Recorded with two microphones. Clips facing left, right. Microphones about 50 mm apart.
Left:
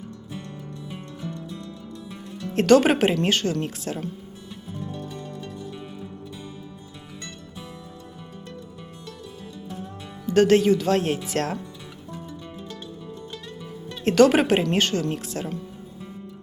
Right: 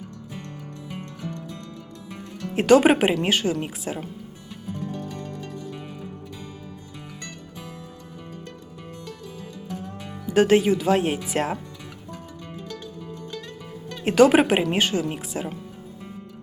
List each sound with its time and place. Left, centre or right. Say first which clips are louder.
0.9 s music: right 1 dB; right
2.5 s speech: right 1 dB; centre
10.2 s speech: left 1 dB; centre
14.0 s speech: right 1 dB; centre